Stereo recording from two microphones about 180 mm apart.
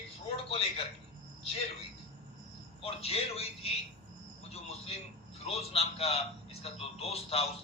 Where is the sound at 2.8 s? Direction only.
35° left (ahead or behind).